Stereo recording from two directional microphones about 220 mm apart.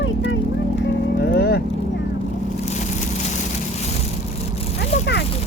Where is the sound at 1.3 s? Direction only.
45° left (ahead or behind).